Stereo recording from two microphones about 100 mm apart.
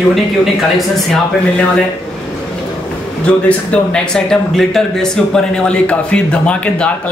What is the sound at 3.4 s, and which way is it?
Speech, 10° left (ahead or behind).